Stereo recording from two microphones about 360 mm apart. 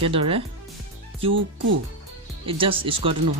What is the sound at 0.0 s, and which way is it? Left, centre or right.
Speech, centre.